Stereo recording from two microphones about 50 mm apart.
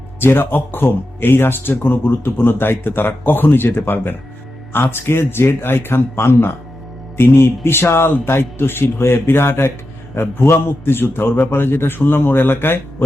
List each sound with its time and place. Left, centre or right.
0.2 s a man's voice: left